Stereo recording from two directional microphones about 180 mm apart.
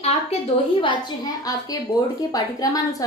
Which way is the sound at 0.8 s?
25° left (ahead or behind).